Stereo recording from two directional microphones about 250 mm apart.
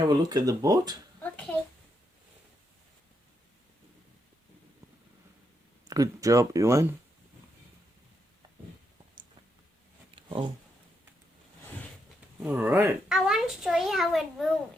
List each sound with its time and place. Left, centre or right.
0.1 s speech: centre
1.2 s a sound: centre
5.9 s speech: centre
10.2 s speech: right
12.4 s a child's voice: centre